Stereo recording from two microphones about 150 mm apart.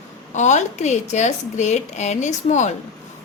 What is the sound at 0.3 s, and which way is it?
A woman's voice, 50° left (ahead or behind).